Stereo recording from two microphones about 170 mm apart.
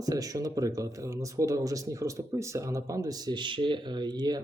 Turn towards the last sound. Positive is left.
turn(degrees=-25)  # may be behind; listen again after turning